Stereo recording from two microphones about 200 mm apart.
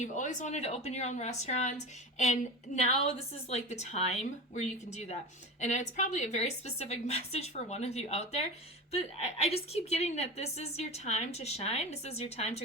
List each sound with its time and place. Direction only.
0.0 s a woman's voice: 35° left (ahead or behind)